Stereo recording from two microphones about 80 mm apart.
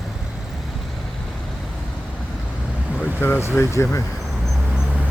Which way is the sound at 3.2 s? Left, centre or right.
Left.